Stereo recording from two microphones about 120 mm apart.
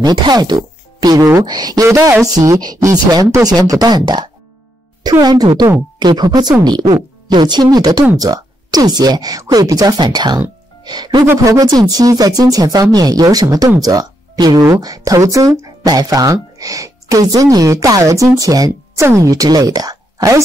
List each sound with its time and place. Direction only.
0.0 s speech: 35° right (ahead or behind)